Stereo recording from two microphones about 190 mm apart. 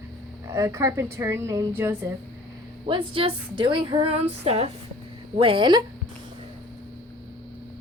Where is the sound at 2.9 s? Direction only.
30° right (ahead or behind).